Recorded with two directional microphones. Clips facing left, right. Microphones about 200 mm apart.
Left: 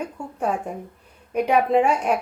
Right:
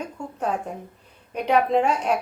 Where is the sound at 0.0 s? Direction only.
10° left (ahead or behind).